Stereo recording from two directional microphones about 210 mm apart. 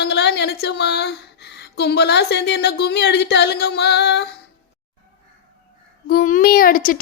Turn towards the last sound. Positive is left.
turn(degrees=40)  # may be behind; listen again after turning